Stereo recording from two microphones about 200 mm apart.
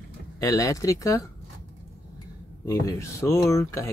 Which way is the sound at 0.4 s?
15° left (ahead or behind).